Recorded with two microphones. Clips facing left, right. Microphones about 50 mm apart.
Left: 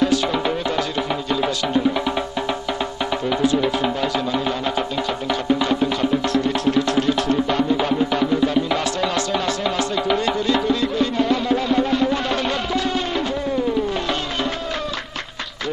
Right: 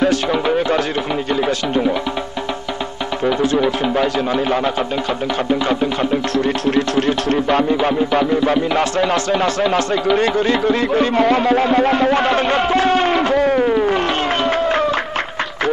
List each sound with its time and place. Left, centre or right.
6.3 s music: right
7.8 s music: right
10.1 s music: right